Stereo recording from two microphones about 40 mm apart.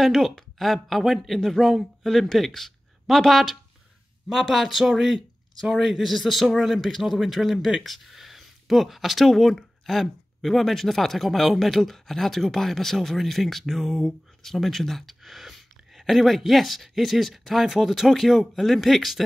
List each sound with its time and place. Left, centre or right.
0.0 s speech: centre
4.3 s speech: centre